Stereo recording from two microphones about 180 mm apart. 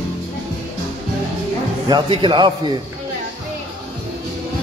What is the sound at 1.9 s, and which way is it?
Speech, 25° right (ahead or behind).